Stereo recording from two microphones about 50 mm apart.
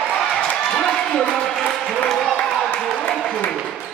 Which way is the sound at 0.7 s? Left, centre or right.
Centre.